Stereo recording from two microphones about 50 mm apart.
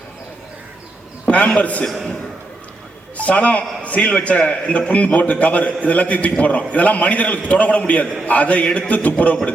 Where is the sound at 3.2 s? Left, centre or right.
Left.